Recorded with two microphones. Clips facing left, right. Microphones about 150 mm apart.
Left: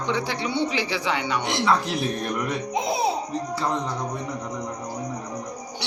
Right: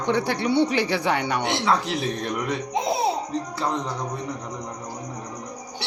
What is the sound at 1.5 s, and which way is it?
Speech, centre (ahead or behind).